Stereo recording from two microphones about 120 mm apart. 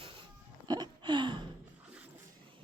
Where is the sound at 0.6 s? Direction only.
35° right (ahead or behind).